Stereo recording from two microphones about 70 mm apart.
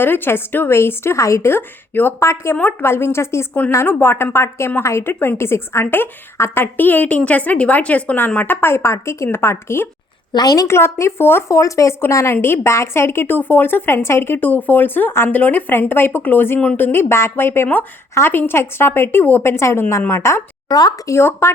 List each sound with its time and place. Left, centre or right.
0.0 s a woman's voice: left
2.1 s a woman's voice: left
10.3 s a woman's voice: left
10.7 s a woman's voice: left
11.5 s a woman's voice: left
20.7 s speech: left
21.1 s a woman's voice: left